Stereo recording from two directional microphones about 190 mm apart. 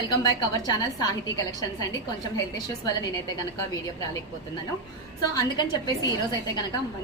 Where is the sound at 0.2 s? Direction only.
20° left (ahead or behind).